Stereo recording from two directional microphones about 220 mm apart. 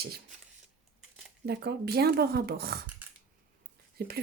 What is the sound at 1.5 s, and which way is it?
Speech, 45° right (ahead or behind).